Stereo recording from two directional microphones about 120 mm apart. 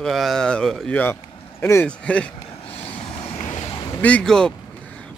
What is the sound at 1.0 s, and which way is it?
Speech, 20° left (ahead or behind).